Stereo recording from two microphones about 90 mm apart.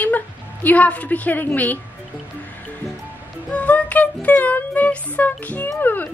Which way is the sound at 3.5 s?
15° left (ahead or behind).